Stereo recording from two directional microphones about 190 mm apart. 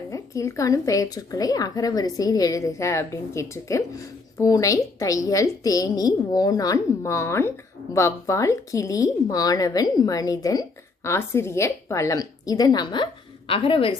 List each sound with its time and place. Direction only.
0.1 s a woman's voice: 15° left (ahead or behind)